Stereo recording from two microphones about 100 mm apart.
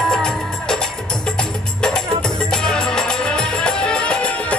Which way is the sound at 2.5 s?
5° left (ahead or behind).